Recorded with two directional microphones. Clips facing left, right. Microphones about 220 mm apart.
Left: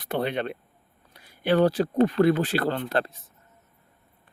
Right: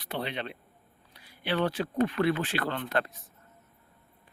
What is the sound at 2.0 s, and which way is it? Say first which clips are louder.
Speech: left 7 dB; 40° left (ahead or behind).